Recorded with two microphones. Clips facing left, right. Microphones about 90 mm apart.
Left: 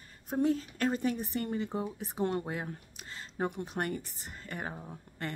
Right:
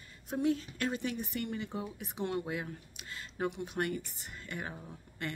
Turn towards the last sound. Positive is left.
turn(degrees=35)  # may be behind; listen again after turning